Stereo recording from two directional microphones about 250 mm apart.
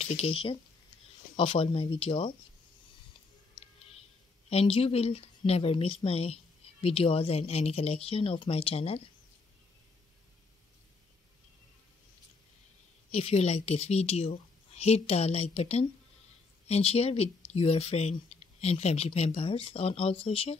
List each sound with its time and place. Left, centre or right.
0.0 s speech: left
4.5 s speech: left
13.1 s speech: left